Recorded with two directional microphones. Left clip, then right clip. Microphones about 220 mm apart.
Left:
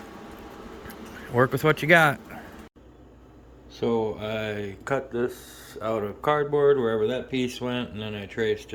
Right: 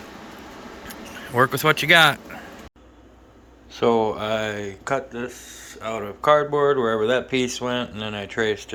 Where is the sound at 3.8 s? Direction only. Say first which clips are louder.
Right 6 dB; centre (ahead or behind).